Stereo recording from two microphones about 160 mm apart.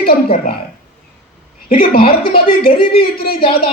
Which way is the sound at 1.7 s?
65° left (ahead or behind).